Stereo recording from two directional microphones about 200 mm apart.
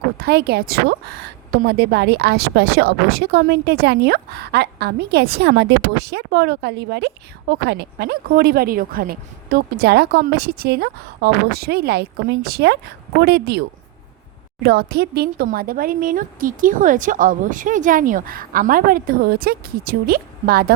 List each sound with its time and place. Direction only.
0.2 s a woman's voice: 55° right (ahead or behind)